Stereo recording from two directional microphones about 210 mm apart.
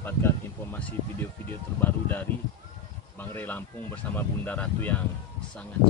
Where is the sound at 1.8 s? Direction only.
10° left (ahead or behind).